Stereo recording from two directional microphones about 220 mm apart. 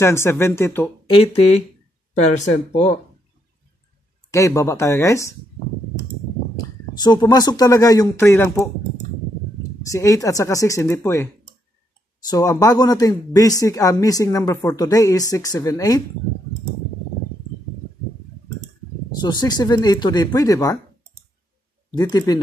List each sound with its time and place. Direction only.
0.0 s speech: 10° left (ahead or behind)
1.0 s speech: 25° left (ahead or behind)
2.7 s speech: 30° left (ahead or behind)
4.3 s speech: 15° left (ahead or behind)
6.5 s speech: 20° left (ahead or behind)
9.8 s speech: 15° left (ahead or behind)
12.3 s speech: 15° left (ahead or behind)
19.1 s speech: 20° left (ahead or behind)
21.9 s speech: 15° left (ahead or behind)